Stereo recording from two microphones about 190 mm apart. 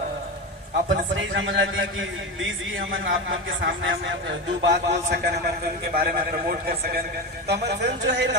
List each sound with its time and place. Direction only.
1.1 s a man's voice: 75° right (ahead or behind)
3.2 s a man's voice: 75° right (ahead or behind)